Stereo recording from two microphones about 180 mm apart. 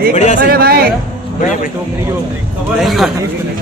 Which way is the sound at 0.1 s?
40° left (ahead or behind).